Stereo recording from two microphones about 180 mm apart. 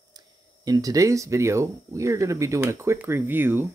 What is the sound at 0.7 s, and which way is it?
Speech, 20° right (ahead or behind).